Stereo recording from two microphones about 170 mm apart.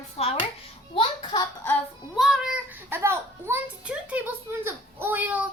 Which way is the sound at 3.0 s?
15° right (ahead or behind).